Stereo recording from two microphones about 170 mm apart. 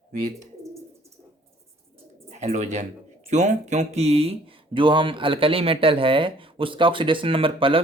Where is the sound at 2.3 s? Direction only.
45° right (ahead or behind).